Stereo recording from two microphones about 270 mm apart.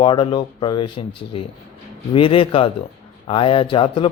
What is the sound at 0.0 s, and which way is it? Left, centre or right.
A man's voice, centre.